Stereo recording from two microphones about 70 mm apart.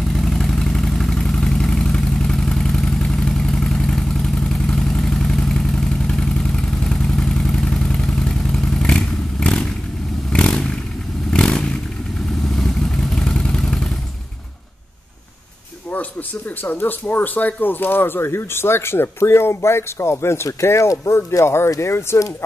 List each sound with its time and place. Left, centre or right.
0.0 s vehicle: centre
16.6 s speech: left